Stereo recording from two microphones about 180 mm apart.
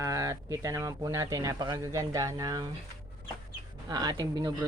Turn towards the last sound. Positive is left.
turn(degrees=-20)  # may be behind; listen again after turning